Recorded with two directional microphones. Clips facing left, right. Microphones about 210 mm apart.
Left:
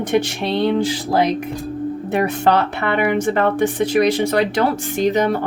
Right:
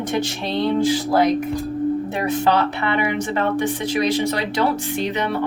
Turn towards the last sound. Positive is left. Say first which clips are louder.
# left 6 dB
turn(degrees=45)  # may be behind; listen again after turning